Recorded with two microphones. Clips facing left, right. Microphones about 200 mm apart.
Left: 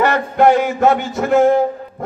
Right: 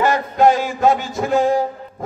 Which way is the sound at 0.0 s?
60° left (ahead or behind).